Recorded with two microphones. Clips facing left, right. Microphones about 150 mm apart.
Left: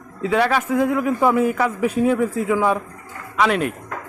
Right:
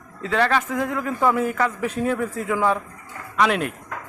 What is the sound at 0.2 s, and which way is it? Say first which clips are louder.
Speech: left 2 dB; 10° left (ahead or behind).